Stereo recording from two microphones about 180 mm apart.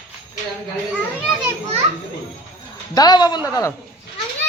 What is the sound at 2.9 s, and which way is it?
Speech, 20° left (ahead or behind).